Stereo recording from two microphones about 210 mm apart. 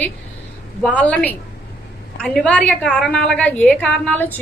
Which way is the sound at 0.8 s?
5° left (ahead or behind).